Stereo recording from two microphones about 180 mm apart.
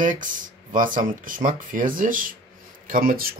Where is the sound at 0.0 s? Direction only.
45° right (ahead or behind).